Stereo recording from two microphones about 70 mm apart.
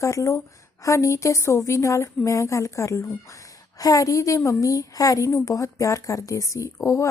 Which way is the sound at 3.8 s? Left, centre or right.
Left.